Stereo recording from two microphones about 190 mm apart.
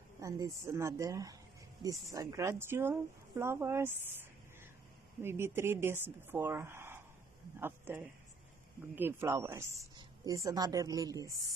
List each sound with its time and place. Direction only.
0.2 s a woman's voice: 15° right (ahead or behind)